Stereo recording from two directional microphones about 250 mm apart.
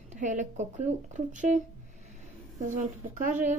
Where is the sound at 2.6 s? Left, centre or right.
Right.